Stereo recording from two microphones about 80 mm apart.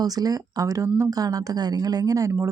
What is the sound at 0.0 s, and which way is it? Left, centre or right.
Speech, right.